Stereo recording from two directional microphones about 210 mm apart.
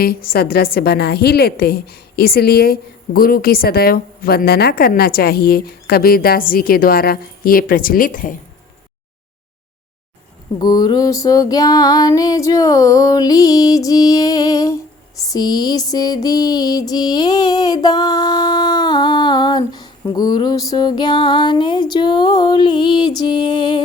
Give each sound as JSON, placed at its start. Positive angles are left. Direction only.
{"t": 0.0, "sound": "a woman's voice", "side_deg": 45}
{"t": 10.6, "sound": "female singing", "side_deg": 20}
{"t": 15.3, "sound": "music", "side_deg": 20}